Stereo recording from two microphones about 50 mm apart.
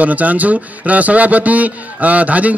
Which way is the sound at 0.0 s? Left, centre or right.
Right.